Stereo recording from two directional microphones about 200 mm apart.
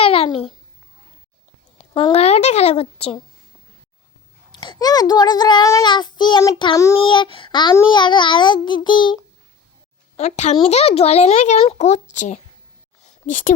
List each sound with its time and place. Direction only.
0.0 s babbling: 30° left (ahead or behind)
1.9 s speech: 25° left (ahead or behind)
4.5 s a child's voice: 25° left (ahead or behind)
10.2 s speech: 35° left (ahead or behind)
13.0 s a sound: 40° left (ahead or behind)